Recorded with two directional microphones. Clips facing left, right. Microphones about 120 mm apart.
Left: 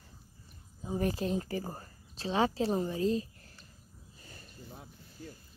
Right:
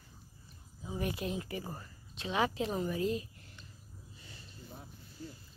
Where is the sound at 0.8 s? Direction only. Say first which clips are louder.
Left 5 dB; 35° left (ahead or behind).